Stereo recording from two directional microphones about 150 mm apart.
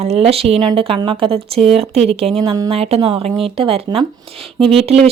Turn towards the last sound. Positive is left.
turn(degrees=-40)  # may be behind; listen again after turning